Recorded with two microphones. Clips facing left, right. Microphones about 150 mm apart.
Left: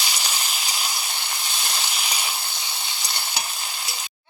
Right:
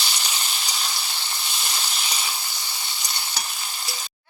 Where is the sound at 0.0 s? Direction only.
10° left (ahead or behind).